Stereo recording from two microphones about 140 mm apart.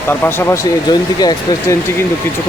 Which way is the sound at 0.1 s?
15° left (ahead or behind).